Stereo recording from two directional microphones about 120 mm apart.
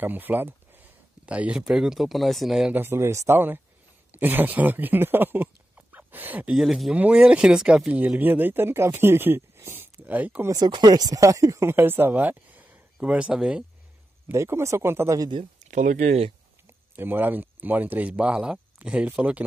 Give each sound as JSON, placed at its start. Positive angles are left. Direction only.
{"t": 0.0, "sound": "speech", "side_deg": -15}
{"t": 2.7, "sound": "speech", "side_deg": -20}
{"t": 10.5, "sound": "speech", "side_deg": -35}
{"t": 14.3, "sound": "speech", "side_deg": -25}
{"t": 15.1, "sound": "speech", "side_deg": -35}
{"t": 15.6, "sound": "speech", "side_deg": -90}
{"t": 16.6, "sound": "speech", "side_deg": -15}